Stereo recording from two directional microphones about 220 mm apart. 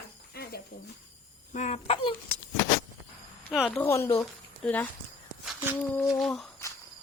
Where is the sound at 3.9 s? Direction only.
10° left (ahead or behind).